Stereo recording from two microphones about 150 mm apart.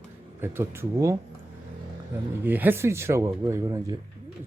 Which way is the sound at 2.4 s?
10° right (ahead or behind).